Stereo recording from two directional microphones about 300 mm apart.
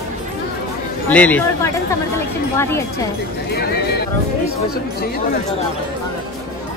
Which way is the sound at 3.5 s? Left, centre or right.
Left.